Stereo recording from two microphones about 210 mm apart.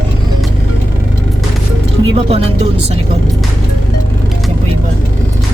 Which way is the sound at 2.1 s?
30° right (ahead or behind).